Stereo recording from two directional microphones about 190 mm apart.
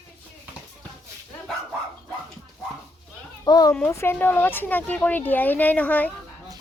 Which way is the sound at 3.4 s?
20° left (ahead or behind).